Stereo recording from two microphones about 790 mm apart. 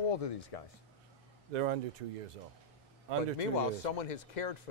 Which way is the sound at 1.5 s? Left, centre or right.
Right.